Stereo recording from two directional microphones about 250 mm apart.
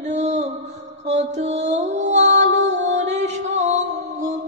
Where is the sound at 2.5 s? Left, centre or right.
Right.